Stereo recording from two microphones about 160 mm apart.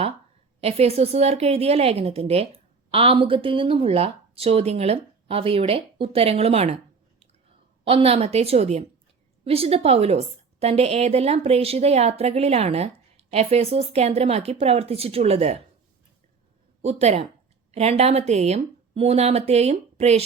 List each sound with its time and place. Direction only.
0.6 s a woman's voice: 40° right (ahead or behind)
7.9 s a woman's voice: 35° right (ahead or behind)
16.8 s a woman's voice: 40° right (ahead or behind)